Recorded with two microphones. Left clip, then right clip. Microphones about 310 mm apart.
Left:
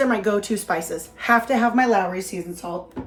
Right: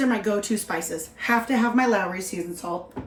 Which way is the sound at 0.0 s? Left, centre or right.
Centre.